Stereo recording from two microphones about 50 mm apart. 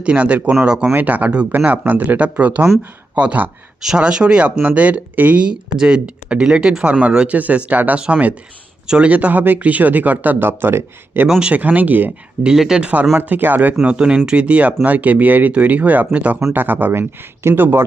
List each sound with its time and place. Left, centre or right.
0.0 s speech: right
0.9 s speech: right
3.8 s speech: centre; by 5.4 s right
5.4 s speech: centre
7.3 s speech: right
7.9 s speech: centre
9.0 s speech: right
11.3 s speech: centre
11.5 s speech: right
12.5 s speech: centre
12.8 s speech: right
13.8 s speech: right
16.5 s speech: right